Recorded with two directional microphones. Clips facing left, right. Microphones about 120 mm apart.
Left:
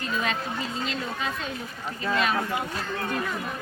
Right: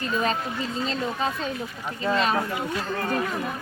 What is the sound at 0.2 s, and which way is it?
Speech, 40° right (ahead or behind).